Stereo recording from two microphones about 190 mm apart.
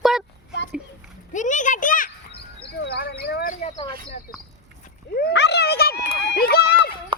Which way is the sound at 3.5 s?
40° left (ahead or behind).